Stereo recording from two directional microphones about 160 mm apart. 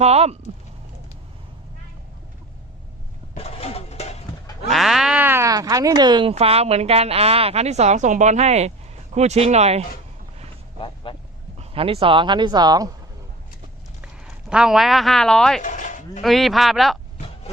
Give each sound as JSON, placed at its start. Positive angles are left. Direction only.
{"t": 0.0, "sound": "a woman's voice", "side_deg": -40}
{"t": 3.3, "sound": "a sound", "side_deg": 40}
{"t": 4.7, "sound": "a sound", "side_deg": 0}
{"t": 6.3, "sound": "a woman's voice", "side_deg": -40}
{"t": 10.8, "sound": "vehicle", "side_deg": 35}
{"t": 11.5, "sound": "a woman's voice", "side_deg": -40}
{"t": 14.5, "sound": "speech", "side_deg": -5}
{"t": 15.6, "sound": "a sound", "side_deg": 50}
{"t": 16.2, "sound": "speech", "side_deg": 0}